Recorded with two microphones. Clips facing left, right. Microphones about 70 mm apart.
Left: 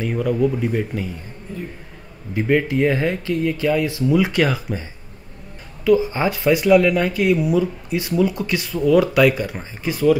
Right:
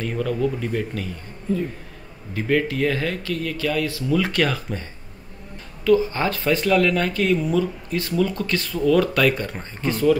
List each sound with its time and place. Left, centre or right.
0.0 s speech: centre
5.9 s speech: centre